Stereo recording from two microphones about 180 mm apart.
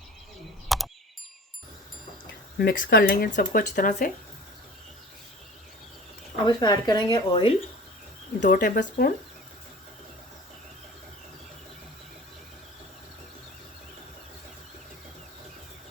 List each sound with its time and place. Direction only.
0.7 s a sound: centre (ahead or behind)
2.6 s speech: 55° left (ahead or behind)
6.4 s speech: 25° left (ahead or behind)
8.4 s speech: 50° left (ahead or behind)